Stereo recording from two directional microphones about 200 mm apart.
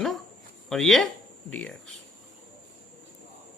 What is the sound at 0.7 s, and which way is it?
Speech, centre (ahead or behind).